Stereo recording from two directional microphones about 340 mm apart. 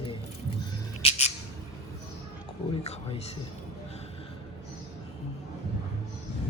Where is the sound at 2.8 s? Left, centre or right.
Centre.